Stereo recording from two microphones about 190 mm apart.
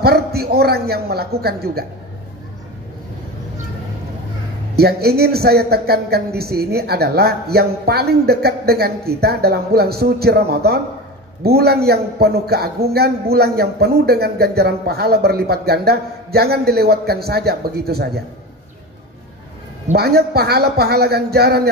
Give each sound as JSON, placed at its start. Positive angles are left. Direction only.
{"t": 0.0, "sound": "a man's voice", "side_deg": -55}
{"t": 4.7, "sound": "a man's voice", "side_deg": -55}
{"t": 20.0, "sound": "a man's voice", "side_deg": -55}